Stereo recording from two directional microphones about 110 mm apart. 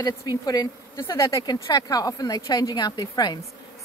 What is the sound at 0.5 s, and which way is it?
Speech, 30° left (ahead or behind).